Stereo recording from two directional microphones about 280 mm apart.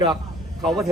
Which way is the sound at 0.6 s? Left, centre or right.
Centre.